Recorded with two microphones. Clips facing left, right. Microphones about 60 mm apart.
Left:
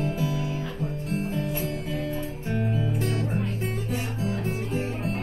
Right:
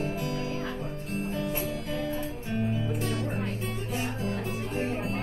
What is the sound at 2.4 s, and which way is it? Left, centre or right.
Music, left.